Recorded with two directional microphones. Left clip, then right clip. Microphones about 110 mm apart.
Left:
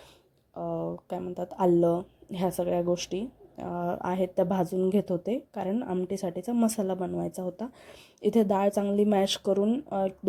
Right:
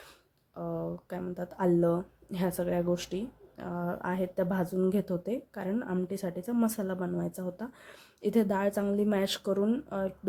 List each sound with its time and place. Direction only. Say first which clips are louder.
0.7 s a sound: left 3 dB; 15° left (ahead or behind)
1.3 s a woman's voice: left 4 dB; 35° left (ahead or behind)
9.5 s a woman's voice: left 4 dB; 25° left (ahead or behind)